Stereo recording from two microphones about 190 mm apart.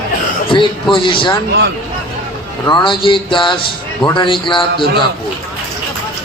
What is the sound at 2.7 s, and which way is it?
A man's voice, 25° left (ahead or behind).